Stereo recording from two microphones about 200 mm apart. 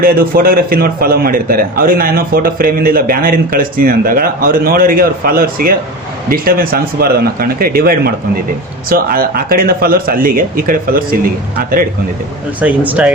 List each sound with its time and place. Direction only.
0.0 s a man's voice: 45° right (ahead or behind)
12.5 s speech: 10° right (ahead or behind)